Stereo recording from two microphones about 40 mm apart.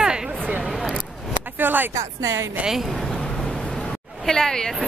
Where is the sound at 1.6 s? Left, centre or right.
Right.